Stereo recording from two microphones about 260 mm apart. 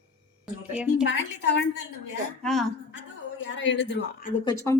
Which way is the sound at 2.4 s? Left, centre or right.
Centre.